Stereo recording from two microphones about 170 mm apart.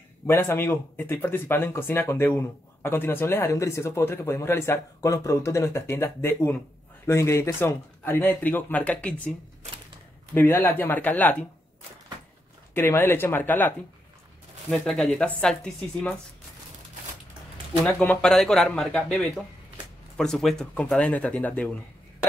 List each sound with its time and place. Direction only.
0.3 s speech: 15° left (ahead or behind)
10.3 s speech: 10° left (ahead or behind)
12.7 s speech: 15° left (ahead or behind)
17.8 s speech: 5° left (ahead or behind)